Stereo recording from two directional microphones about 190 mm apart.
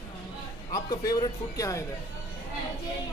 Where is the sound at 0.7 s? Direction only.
20° left (ahead or behind).